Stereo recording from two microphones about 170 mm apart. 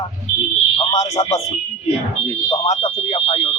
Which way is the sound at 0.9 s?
40° left (ahead or behind).